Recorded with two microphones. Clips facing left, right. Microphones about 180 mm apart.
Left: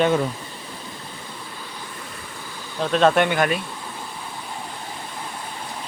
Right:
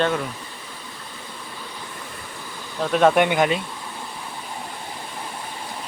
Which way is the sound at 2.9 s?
10° right (ahead or behind).